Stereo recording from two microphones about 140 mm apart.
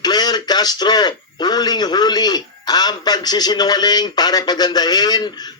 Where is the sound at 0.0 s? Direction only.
30° left (ahead or behind).